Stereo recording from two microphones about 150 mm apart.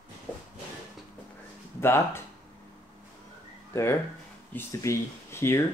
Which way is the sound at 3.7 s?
20° left (ahead or behind).